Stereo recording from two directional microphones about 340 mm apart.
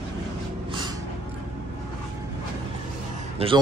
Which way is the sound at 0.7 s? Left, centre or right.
Centre.